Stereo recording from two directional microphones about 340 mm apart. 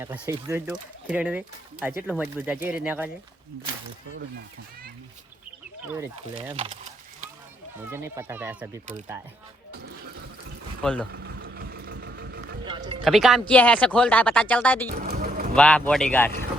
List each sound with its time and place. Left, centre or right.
0.0 s speech: centre
5.8 s speech: centre
7.8 s speech: centre
11.1 s vehicle: right
12.6 s music: centre
13.1 s speech: centre
14.8 s music: right
15.5 s speech: centre